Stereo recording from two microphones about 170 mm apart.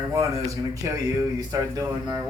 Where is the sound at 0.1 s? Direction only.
20° right (ahead or behind).